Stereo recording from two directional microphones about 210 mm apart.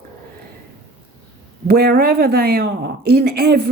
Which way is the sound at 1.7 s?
45° right (ahead or behind).